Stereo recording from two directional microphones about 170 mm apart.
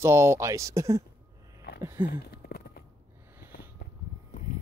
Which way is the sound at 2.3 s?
65° left (ahead or behind).